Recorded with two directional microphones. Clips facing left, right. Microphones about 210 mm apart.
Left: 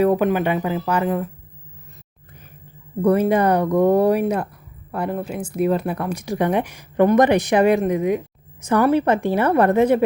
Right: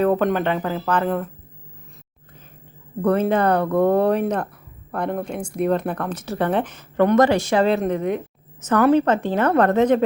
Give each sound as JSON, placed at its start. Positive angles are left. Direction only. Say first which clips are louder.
{"t": 0.0, "sound": "speech", "louder": "left 1 dB", "side_deg": 10}
{"t": 3.0, "sound": "speech", "louder": "left 2 dB", "side_deg": 10}